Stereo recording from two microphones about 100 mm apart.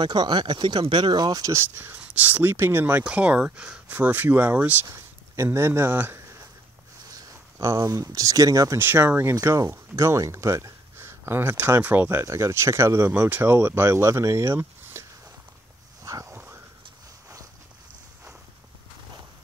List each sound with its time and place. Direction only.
0.0 s speech: 45° right (ahead or behind)
1.5 s speech: 20° right (ahead or behind)
4.8 s speech: 30° right (ahead or behind)
8.7 s speech: 25° right (ahead or behind)
9.3 s speech: 35° right (ahead or behind)
16.0 s dog: 35° right (ahead or behind)
16.3 s a sound: 20° right (ahead or behind)